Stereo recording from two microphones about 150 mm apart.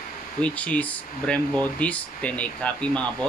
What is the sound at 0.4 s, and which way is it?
Speech, 10° left (ahead or behind).